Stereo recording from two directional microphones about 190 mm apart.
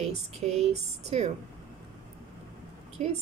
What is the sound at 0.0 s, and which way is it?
A woman's voice, 35° right (ahead or behind).